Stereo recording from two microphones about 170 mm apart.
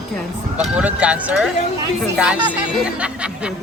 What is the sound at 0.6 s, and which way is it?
Speech, 5° right (ahead or behind).